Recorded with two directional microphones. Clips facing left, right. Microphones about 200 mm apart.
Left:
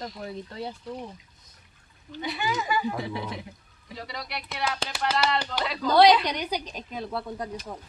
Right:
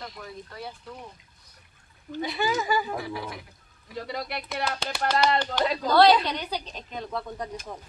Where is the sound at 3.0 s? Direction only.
25° left (ahead or behind).